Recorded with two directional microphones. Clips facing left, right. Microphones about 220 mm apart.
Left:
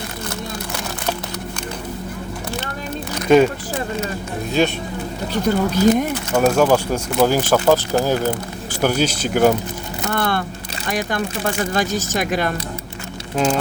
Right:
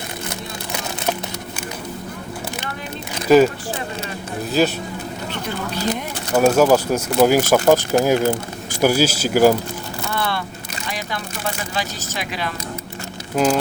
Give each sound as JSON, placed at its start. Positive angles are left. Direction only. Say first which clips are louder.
{"t": 3.2, "sound": "speech", "louder": "even", "side_deg": -5}
{"t": 4.6, "sound": "speech", "louder": "even", "side_deg": 0}
{"t": 5.5, "sound": "speech", "louder": "left 11 dB", "side_deg": 40}
{"t": 6.3, "sound": "speech", "louder": "right 2 dB", "side_deg": -10}
{"t": 10.1, "sound": "a sound", "louder": "left 4 dB", "side_deg": 50}
{"t": 10.8, "sound": "speech", "louder": "left 7 dB", "side_deg": 50}
{"t": 13.3, "sound": "speech", "louder": "right 1 dB", "side_deg": -5}